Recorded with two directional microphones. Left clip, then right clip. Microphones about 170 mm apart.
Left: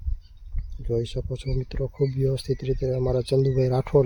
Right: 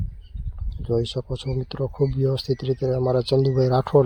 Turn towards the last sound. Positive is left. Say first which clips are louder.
# right 3 dB
turn(degrees=0)  # may be behind; listen again after turning